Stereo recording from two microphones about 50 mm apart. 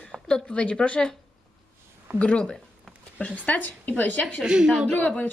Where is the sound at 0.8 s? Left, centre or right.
Left.